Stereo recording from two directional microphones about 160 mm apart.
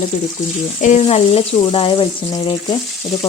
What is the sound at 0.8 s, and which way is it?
Frying, 45° left (ahead or behind).